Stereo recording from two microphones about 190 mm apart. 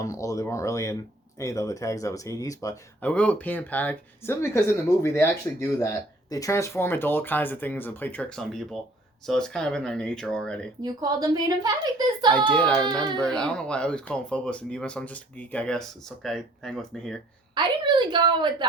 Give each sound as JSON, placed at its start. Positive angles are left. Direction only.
{"t": 0.0, "sound": "speech", "side_deg": 15}
{"t": 3.0, "sound": "speech", "side_deg": 5}
{"t": 10.8, "sound": "a woman's voice", "side_deg": -20}
{"t": 12.5, "sound": "speech", "side_deg": 5}
{"t": 17.5, "sound": "a woman's voice", "side_deg": -25}